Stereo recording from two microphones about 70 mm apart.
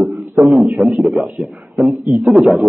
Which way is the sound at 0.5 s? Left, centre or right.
Centre.